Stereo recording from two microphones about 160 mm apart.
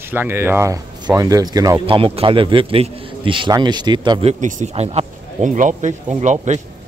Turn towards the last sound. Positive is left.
turn(degrees=-50)  # may be behind; listen again after turning